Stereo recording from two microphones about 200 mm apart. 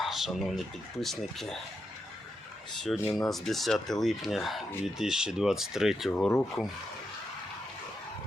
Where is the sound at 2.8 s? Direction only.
Centre (ahead or behind).